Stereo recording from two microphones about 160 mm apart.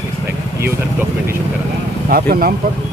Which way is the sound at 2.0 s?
70° right (ahead or behind).